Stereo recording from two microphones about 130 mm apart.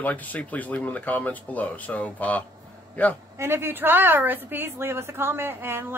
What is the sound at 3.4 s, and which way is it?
Speech, 20° right (ahead or behind).